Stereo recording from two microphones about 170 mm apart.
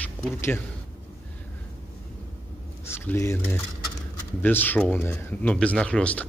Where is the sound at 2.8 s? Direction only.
15° left (ahead or behind).